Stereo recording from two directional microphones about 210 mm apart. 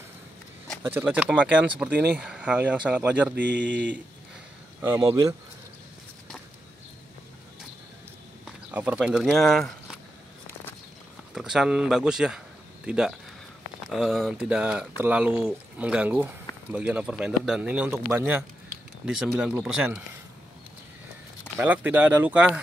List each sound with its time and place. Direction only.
0.8 s speech: 10° right (ahead or behind)
3.5 s speech: 60° right (ahead or behind)
4.8 s speech: 10° right (ahead or behind)
8.5 s speech: 5° right (ahead or behind)
11.3 s speech: centre (ahead or behind)
21.5 s speech: 10° right (ahead or behind)